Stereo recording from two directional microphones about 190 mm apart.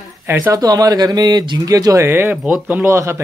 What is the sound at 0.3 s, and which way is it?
Speech, 20° right (ahead or behind).